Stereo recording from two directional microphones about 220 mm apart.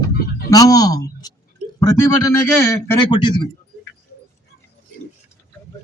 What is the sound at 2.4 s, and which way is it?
Speech, 10° left (ahead or behind).